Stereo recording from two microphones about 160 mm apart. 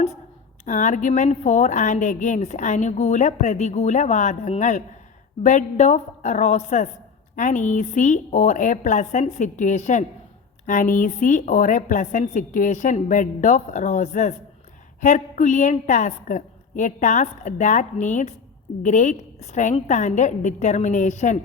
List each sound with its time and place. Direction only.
0.6 s a woman's voice: 50° left (ahead or behind)